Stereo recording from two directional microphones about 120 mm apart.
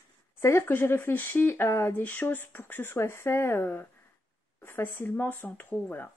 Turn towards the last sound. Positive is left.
turn(degrees=15)  # may be behind; listen again after turning